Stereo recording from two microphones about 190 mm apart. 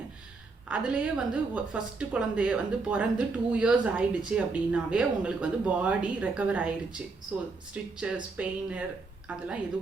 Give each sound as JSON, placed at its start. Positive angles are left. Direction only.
{"t": 0.7, "sound": "a woman's voice", "side_deg": -5}